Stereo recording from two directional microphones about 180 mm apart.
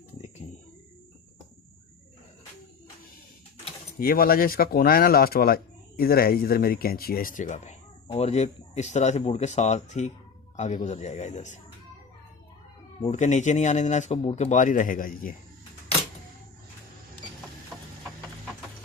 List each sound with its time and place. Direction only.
3.9 s speech: 55° left (ahead or behind)
13.0 s speech: 40° left (ahead or behind)
17.7 s a sound: 5° right (ahead or behind)